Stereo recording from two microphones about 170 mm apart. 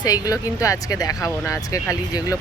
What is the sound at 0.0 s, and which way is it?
Speech, 20° left (ahead or behind).